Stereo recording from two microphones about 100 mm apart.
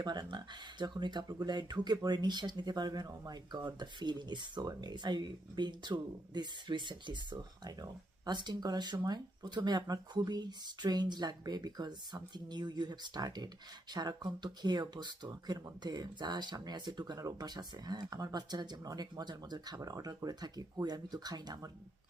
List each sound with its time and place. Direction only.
0.0 s speech: 45° right (ahead or behind)